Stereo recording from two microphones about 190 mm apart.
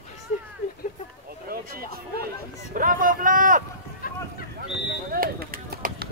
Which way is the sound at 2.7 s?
45° right (ahead or behind).